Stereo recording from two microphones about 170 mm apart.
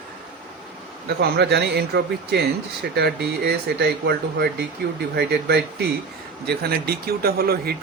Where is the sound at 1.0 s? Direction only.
70° right (ahead or behind).